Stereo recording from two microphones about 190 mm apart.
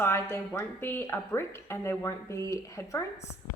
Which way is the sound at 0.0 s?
10° left (ahead or behind).